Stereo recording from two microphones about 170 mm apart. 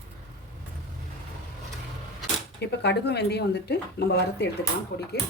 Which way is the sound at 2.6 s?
80° left.